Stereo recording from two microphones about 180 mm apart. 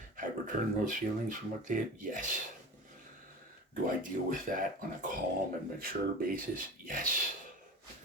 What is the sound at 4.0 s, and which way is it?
Speech, 50° right (ahead or behind).